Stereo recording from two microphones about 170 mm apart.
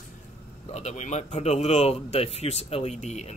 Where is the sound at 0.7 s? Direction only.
40° left (ahead or behind).